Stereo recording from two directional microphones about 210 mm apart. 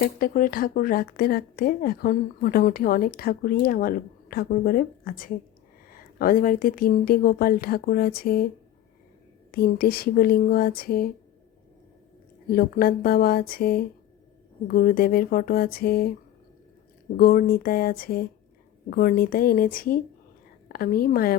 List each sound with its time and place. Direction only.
0.0 s speech: 40° left (ahead or behind)
9.5 s speech: 45° left (ahead or behind)
12.5 s speech: 45° left (ahead or behind)
17.2 s speech: 45° left (ahead or behind)